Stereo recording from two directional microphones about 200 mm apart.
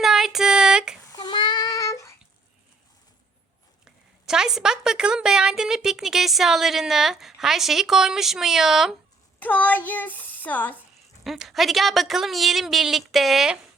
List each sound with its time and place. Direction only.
0.0 s a sound: centre (ahead or behind)
1.1 s child singing: 20° left (ahead or behind)
3.8 s a woman's voice: 5° right (ahead or behind)